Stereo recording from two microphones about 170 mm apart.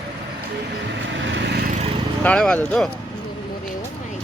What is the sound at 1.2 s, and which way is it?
Vehicle, 90° right.